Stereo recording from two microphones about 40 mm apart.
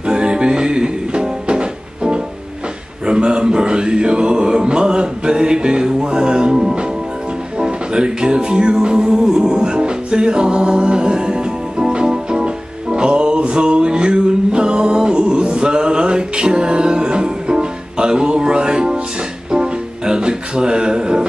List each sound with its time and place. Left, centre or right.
0.0 s music: right